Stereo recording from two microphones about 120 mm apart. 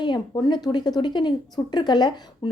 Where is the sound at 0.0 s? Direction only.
40° left (ahead or behind).